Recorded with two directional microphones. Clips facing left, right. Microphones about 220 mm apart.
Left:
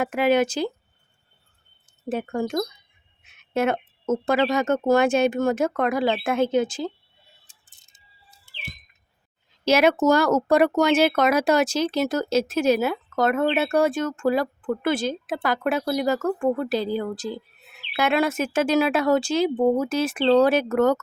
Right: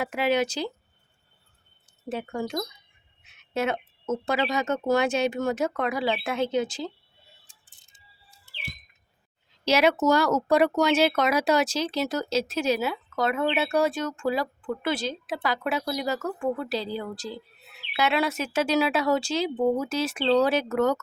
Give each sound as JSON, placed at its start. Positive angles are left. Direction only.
{"t": 0.0, "sound": "speech", "side_deg": 50}
{"t": 2.0, "sound": "speech", "side_deg": 50}
{"t": 7.7, "sound": "music", "side_deg": 45}
{"t": 9.6, "sound": "speech", "side_deg": 50}